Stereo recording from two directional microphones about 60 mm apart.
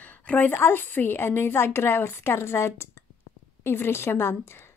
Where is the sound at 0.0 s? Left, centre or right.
Left.